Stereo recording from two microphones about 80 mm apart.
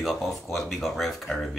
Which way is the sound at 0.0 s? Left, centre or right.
Centre.